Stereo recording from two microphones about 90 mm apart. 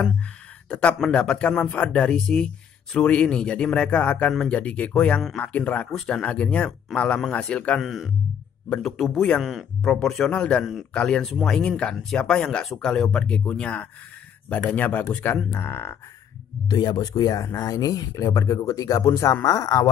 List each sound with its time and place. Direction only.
0.7 s speech: 10° left (ahead or behind)
7.8 s speech: centre (ahead or behind)
9.4 s speech: centre (ahead or behind)
10.6 s speech: 5° right (ahead or behind)
10.9 s speech: 10° left (ahead or behind)
15.5 s speech: 25° left (ahead or behind)
16.6 s speech: 50° left (ahead or behind)